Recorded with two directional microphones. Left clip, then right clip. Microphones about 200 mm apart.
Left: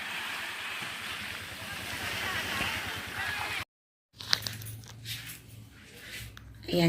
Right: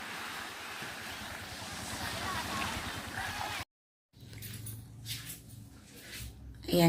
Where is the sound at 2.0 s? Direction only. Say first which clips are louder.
Left 4 dB; 55° right (ahead or behind).